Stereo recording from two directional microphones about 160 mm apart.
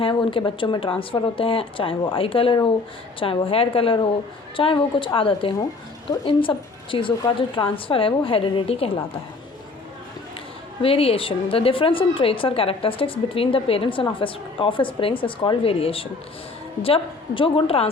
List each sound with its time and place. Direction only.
0.0 s a woman's voice: 30° left (ahead or behind)
10.8 s a woman's voice: 35° left (ahead or behind)